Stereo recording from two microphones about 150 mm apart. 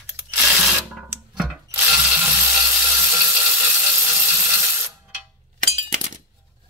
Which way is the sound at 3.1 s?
10° right (ahead or behind).